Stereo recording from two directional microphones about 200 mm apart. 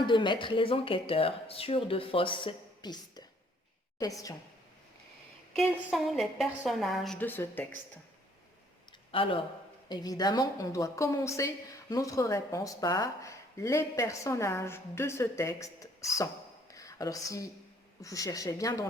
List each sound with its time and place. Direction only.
0.0 s a woman's voice: 25° left (ahead or behind)
5.5 s a woman's voice: centre (ahead or behind)
8.9 s a sound: 25° left (ahead or behind)
9.9 s a woman's voice: 20° left (ahead or behind)